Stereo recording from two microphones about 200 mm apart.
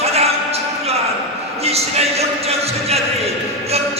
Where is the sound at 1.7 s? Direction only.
30° right (ahead or behind).